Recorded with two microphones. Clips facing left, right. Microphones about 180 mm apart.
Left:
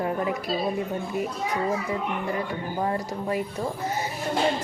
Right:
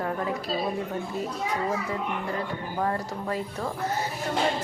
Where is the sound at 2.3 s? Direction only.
15° left (ahead or behind).